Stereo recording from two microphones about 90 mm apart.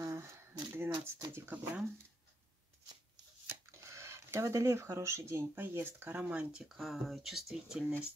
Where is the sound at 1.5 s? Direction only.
15° right (ahead or behind).